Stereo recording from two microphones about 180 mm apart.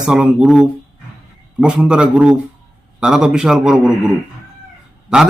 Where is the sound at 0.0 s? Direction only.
5° right (ahead or behind).